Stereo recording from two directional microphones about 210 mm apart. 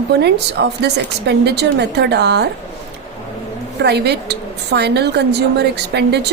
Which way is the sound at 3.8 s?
50° right (ahead or behind).